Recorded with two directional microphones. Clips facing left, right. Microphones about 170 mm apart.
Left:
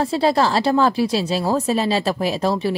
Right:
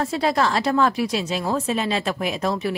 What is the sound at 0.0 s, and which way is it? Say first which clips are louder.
A woman's voice: left 3 dB; 30° left (ahead or behind).